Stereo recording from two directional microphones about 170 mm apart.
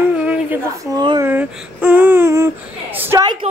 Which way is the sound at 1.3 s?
10° right (ahead or behind).